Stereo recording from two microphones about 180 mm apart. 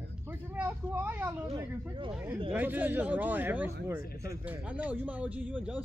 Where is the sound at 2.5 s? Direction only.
10° right (ahead or behind).